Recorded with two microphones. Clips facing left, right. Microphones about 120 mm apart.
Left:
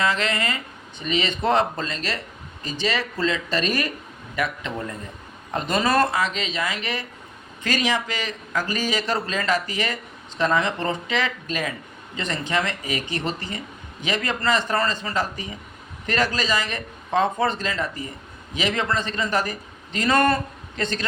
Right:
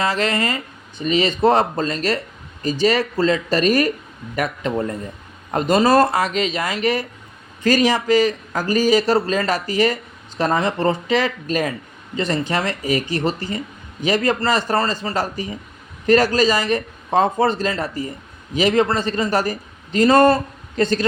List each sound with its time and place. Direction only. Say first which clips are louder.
0.0 s a man's voice: right 3 dB; 35° right (ahead or behind)